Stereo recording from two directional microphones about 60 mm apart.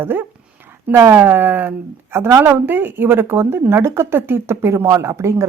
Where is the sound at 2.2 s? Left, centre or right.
Right.